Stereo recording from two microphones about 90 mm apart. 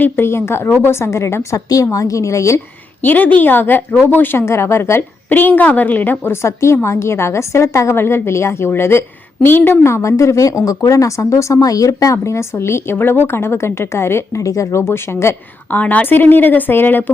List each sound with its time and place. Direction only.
0.0 s speech: 25° left (ahead or behind)
3.0 s a woman's voice: 20° left (ahead or behind)
15.8 s a woman's voice: 15° left (ahead or behind)